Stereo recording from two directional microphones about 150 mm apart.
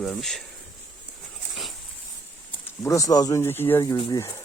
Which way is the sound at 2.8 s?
20° left (ahead or behind).